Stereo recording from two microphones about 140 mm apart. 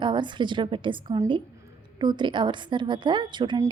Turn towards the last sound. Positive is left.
turn(degrees=-35)  # may be behind; listen again after turning